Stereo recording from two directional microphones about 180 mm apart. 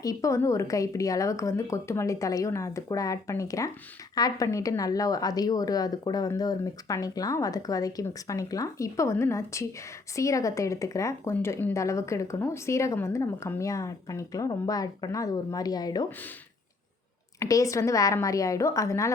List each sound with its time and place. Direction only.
0.0 s speech: 20° left (ahead or behind)
17.4 s speech: 20° left (ahead or behind)